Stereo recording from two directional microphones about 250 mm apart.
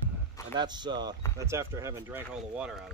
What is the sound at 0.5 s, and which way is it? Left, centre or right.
Speech, centre.